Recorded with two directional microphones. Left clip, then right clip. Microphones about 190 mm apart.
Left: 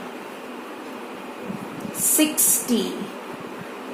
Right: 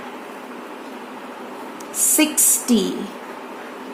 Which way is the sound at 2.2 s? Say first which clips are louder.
Right 2 dB; 45° right (ahead or behind).